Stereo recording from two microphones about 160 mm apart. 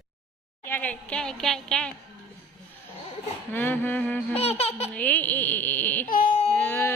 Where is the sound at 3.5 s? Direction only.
10° left (ahead or behind).